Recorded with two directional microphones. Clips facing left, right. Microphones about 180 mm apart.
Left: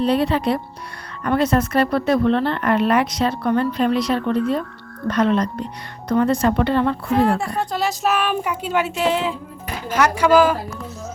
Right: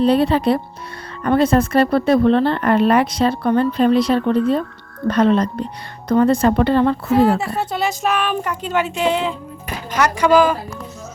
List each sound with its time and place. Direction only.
0.0 s a woman's voice: 30° right (ahead or behind)
7.1 s speech: 5° right (ahead or behind)